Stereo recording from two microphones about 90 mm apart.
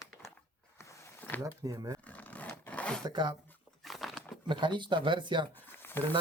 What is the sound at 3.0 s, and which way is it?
Speech, 50° right (ahead or behind).